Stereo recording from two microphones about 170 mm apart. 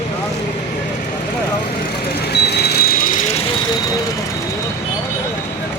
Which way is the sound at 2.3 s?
75° left (ahead or behind).